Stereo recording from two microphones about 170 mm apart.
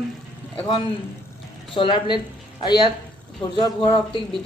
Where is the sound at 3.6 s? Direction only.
30° left (ahead or behind).